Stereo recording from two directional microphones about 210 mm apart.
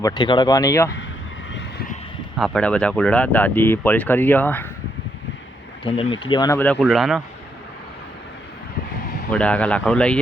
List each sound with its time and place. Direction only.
0.0 s speech: 20° left (ahead or behind)
2.3 s speech: centre (ahead or behind)
6.2 s speech: 20° left (ahead or behind); by 7.2 s centre (ahead or behind)
9.3 s speech: 5° left (ahead or behind)